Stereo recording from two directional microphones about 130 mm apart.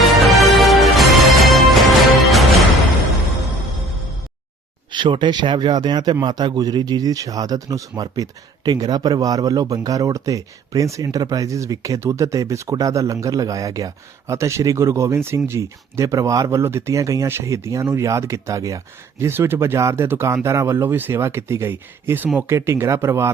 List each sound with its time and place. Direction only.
0.1 s music: centre (ahead or behind)
4.9 s speech: 35° right (ahead or behind); by 23.3 s 20° right (ahead or behind)